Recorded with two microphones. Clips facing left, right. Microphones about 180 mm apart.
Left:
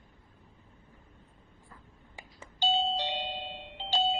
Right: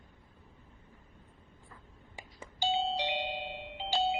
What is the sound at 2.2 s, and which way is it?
Beep, 10° right (ahead or behind).